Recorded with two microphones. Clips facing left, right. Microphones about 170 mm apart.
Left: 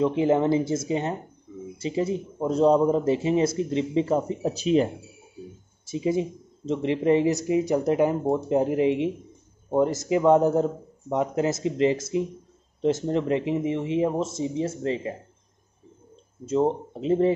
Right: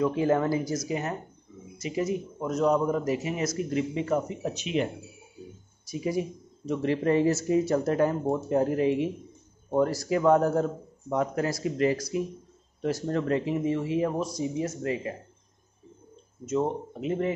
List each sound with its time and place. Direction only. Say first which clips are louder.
0.0 s speech: left 3 dB; 20° left (ahead or behind)
5.9 s speech: left 4 dB; 25° left (ahead or behind)
16.4 s speech: left 4 dB; 30° left (ahead or behind)